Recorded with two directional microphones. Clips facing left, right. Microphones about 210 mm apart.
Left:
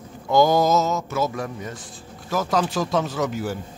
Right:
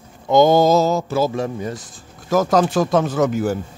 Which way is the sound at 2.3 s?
45° right (ahead or behind).